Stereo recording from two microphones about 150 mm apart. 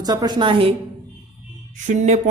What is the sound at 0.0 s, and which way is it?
Speech, 25° right (ahead or behind).